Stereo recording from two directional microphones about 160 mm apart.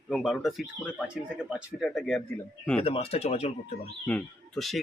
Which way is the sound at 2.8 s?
35° left (ahead or behind).